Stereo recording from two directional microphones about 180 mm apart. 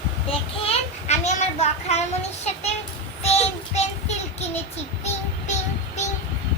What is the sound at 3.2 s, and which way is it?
Child singing, 35° left (ahead or behind).